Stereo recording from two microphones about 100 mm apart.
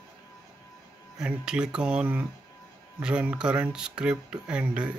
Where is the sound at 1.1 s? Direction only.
10° right (ahead or behind).